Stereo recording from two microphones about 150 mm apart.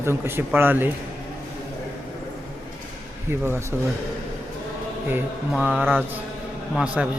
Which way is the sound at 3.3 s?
15° right (ahead or behind).